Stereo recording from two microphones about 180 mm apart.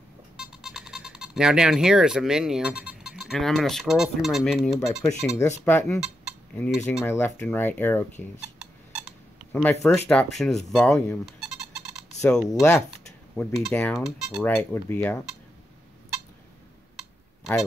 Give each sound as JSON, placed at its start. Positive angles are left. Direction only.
{"t": 0.4, "sound": "speech", "side_deg": -5}
{"t": 5.4, "sound": "speech", "side_deg": 15}
{"t": 5.9, "sound": "cutlery", "side_deg": 0}
{"t": 7.1, "sound": "speech", "side_deg": 15}
{"t": 9.5, "sound": "speech", "side_deg": 10}
{"t": 12.4, "sound": "speech", "side_deg": 20}
{"t": 13.4, "sound": "speech", "side_deg": 0}
{"t": 14.4, "sound": "speech", "side_deg": 10}